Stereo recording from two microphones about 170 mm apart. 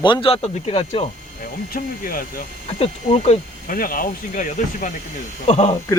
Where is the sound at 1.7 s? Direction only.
55° left (ahead or behind).